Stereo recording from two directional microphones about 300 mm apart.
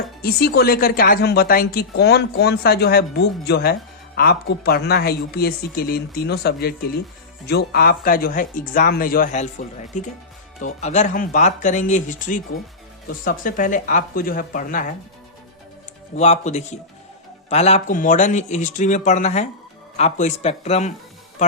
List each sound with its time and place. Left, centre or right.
0.2 s speech: left
16.1 s speech: left